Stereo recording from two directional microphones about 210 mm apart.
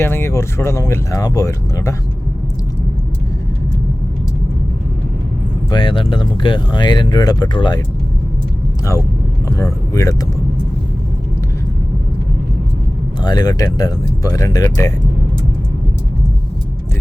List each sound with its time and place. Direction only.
0.0 s speech: 10° left (ahead or behind)
5.7 s speech: 25° left (ahead or behind)
9.5 s speech: 15° left (ahead or behind)
13.2 s speech: 20° left (ahead or behind)